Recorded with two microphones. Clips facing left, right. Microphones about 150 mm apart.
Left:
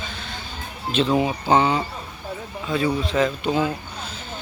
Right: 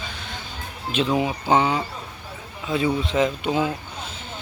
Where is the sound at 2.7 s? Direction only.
20° right (ahead or behind).